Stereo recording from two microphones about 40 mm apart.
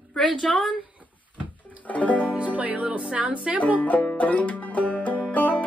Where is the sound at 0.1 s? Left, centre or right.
Centre.